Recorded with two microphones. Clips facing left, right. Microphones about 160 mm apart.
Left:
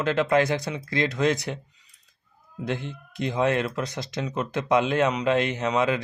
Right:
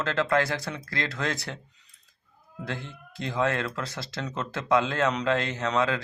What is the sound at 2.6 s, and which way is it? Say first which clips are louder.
Speech: left 6 dB; 20° left (ahead or behind).